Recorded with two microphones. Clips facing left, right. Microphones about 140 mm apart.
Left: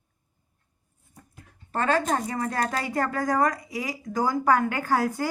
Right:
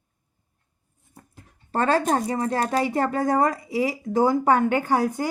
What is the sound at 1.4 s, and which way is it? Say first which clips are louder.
Speech: right 4 dB; 35° right (ahead or behind).